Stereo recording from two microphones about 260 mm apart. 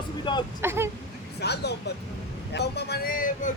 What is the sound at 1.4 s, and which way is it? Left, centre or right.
Speech, left.